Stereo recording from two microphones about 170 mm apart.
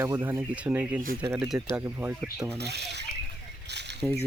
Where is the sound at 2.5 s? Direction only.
75° right (ahead or behind).